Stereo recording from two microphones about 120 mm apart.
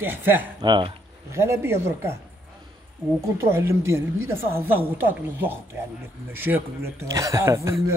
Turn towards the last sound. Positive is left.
turn(degrees=-25)  # may be behind; listen again after turning